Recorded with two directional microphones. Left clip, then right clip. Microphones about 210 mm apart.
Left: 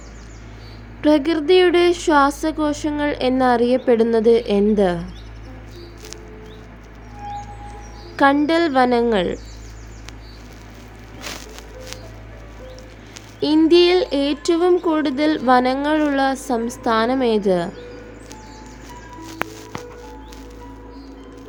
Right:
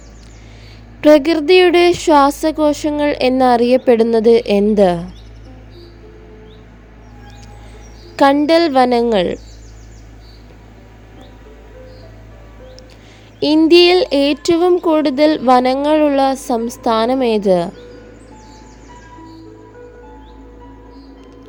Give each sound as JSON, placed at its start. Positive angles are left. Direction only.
{"t": 1.0, "sound": "a woman's voice", "side_deg": -35}
{"t": 8.1, "sound": "a woman's voice", "side_deg": -35}
{"t": 13.4, "sound": "a woman's voice", "side_deg": -30}